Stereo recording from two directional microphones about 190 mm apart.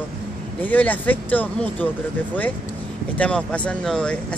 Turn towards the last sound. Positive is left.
turn(degrees=5)  # may be behind; listen again after turning